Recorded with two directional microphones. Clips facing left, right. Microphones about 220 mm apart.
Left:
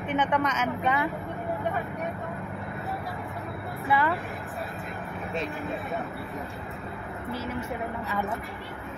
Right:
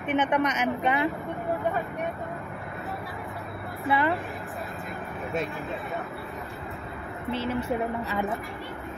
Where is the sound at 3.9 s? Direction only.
20° right (ahead or behind).